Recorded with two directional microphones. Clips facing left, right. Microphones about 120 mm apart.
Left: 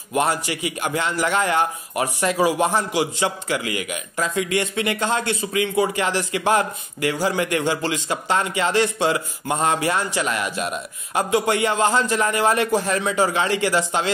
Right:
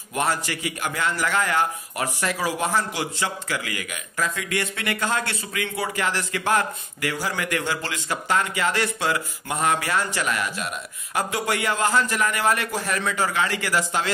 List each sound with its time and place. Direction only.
0.1 s a man's voice: 20° left (ahead or behind)